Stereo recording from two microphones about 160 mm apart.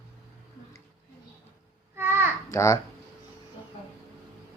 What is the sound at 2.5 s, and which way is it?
Speech, 20° left (ahead or behind).